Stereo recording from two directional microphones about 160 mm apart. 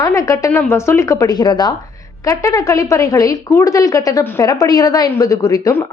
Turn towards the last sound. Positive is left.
turn(degrees=20)  # may be behind; listen again after turning